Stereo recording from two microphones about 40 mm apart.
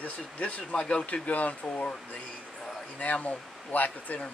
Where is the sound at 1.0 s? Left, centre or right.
Left.